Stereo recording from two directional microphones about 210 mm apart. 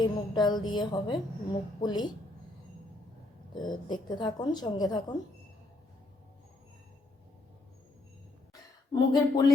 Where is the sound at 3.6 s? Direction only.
20° left (ahead or behind).